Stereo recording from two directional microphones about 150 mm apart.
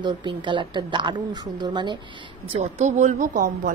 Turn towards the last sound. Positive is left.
turn(degrees=-60)  # may be behind; listen again after turning